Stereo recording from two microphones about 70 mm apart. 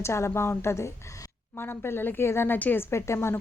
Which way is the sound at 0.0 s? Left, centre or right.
Left.